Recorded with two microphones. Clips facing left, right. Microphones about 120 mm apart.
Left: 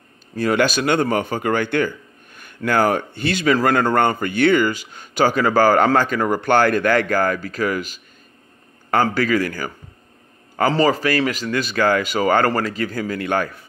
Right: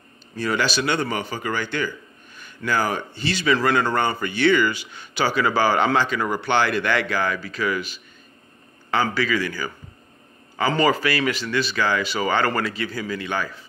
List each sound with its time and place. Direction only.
0.4 s speech: 50° left (ahead or behind)
10.7 s speech: 35° left (ahead or behind); by 13.7 s 55° left (ahead or behind)